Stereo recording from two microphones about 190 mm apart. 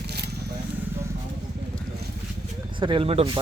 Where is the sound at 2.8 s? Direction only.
25° right (ahead or behind).